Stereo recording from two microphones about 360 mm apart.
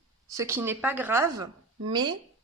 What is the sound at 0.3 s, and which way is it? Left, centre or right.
Speech, centre.